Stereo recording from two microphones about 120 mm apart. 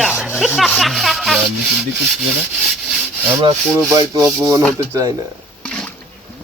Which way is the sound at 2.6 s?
Centre (ahead or behind).